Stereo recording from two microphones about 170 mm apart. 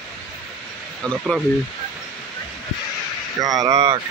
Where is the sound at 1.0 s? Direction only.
5° left (ahead or behind).